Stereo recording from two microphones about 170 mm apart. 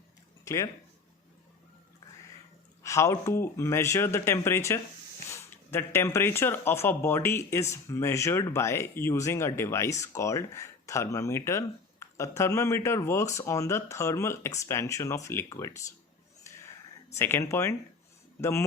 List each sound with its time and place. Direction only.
0.4 s speech: 20° left (ahead or behind)
2.8 s speech: 15° left (ahead or behind)
17.2 s speech: 15° left (ahead or behind)